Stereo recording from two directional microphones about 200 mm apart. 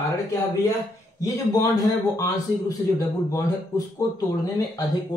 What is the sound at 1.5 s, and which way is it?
Speech, 15° left (ahead or behind).